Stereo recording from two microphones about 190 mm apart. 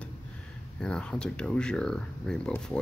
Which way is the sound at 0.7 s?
5° left (ahead or behind).